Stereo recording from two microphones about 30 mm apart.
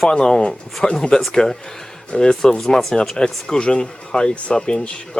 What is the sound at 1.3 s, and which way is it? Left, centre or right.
Speech, centre.